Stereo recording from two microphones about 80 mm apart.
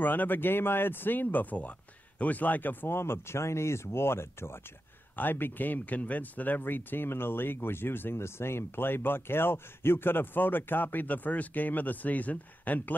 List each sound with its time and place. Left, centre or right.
0.0 s speech: left